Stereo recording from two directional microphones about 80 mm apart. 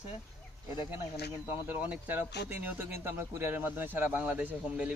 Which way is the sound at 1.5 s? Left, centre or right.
Right.